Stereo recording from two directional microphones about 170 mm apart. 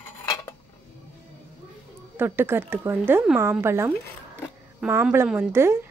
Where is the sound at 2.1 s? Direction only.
15° right (ahead or behind).